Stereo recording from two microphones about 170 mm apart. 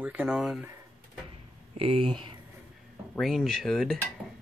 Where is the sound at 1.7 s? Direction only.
35° right (ahead or behind).